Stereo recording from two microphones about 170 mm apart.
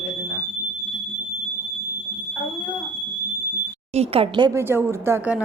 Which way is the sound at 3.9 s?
35° right (ahead or behind).